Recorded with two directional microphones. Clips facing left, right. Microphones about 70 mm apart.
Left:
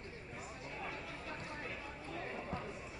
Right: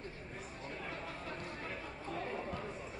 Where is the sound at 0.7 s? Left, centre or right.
Right.